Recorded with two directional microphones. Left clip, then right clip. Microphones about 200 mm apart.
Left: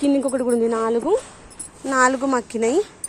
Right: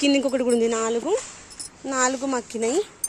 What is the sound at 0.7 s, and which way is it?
Speech, 5° right (ahead or behind).